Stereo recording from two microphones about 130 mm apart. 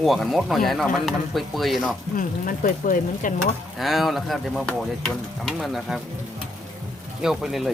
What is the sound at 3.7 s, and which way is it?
Speech, centre (ahead or behind).